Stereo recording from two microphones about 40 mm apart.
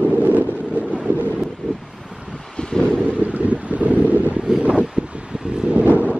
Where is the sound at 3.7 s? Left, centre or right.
Right.